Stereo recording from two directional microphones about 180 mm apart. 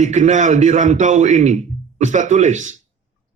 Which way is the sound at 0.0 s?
40° right (ahead or behind).